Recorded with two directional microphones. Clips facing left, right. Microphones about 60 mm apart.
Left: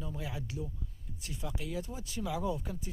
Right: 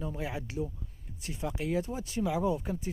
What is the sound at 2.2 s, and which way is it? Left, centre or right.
Speech, right.